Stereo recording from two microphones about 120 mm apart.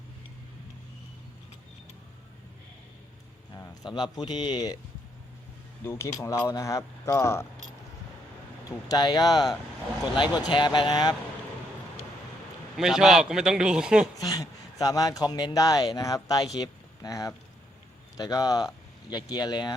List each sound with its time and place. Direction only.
3.8 s speech: 40° left (ahead or behind)
5.8 s speech: 20° left (ahead or behind)
8.9 s speech: 35° left (ahead or behind)
12.7 s a man's voice: 5° right (ahead or behind)
14.2 s speech: 30° left (ahead or behind)